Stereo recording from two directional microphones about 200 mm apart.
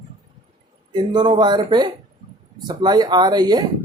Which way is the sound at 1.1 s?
25° right (ahead or behind).